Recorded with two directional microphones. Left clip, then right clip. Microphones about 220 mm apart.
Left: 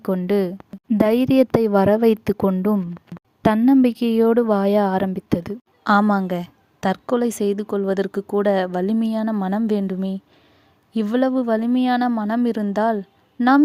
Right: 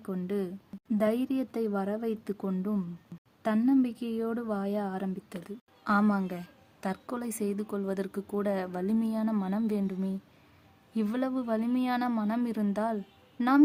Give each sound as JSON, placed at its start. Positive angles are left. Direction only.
{"t": 0.0, "sound": "speech", "side_deg": 40}
{"t": 3.1, "sound": "a sound", "side_deg": 0}
{"t": 3.4, "sound": "speech", "side_deg": 40}